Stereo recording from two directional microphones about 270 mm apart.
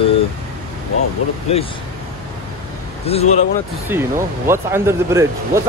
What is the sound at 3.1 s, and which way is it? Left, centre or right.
Speech, left.